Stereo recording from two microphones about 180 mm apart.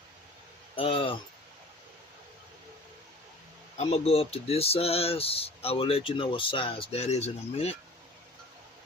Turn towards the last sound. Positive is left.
turn(degrees=35)  # may be behind; listen again after turning